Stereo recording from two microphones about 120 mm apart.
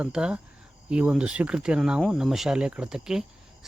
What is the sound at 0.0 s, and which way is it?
Speech, 5° right (ahead or behind).